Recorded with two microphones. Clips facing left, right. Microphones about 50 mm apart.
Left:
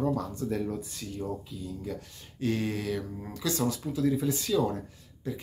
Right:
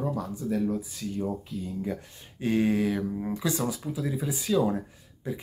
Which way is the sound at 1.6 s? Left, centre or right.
Right.